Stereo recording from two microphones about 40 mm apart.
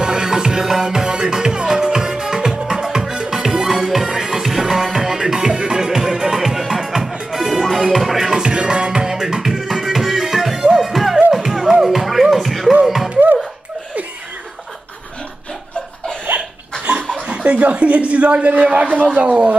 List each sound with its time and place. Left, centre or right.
0.0 s music: centre
8.3 s music: centre
16.3 s laughter: right
17.3 s a sound: right